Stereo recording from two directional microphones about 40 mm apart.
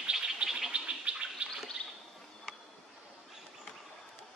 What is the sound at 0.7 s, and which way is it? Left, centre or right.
Gargling, right.